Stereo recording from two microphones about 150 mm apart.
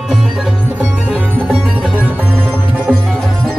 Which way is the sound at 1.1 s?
5° right (ahead or behind).